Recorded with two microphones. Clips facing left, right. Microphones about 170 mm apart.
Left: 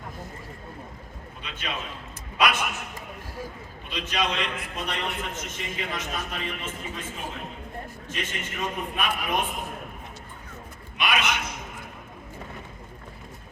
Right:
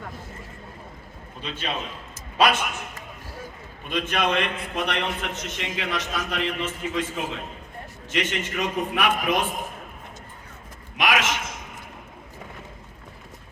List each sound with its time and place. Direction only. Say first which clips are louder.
1.4 s a man's voice: right 4 dB; 30° right (ahead or behind)
3.8 s a man's voice: right 4 dB; 50° right (ahead or behind); by 9.5 s 90° right
10.9 s a man's voice: right 3 dB; 90° right